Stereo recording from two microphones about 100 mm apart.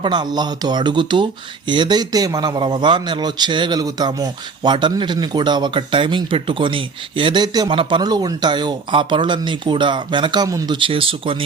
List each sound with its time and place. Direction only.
0.0 s speech: 50° right (ahead or behind)
2.6 s speech: 50° right (ahead or behind)
7.7 s speech: 55° right (ahead or behind)